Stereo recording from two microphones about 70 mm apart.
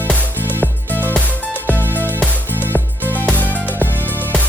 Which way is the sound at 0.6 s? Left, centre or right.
Left.